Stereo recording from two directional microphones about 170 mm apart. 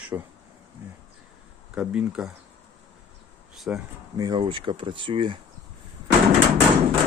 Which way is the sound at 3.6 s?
5° right (ahead or behind).